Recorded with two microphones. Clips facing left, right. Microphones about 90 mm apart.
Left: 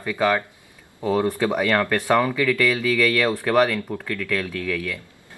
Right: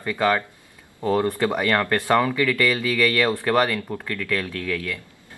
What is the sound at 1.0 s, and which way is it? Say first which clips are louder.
Speech: even; 15° left (ahead or behind).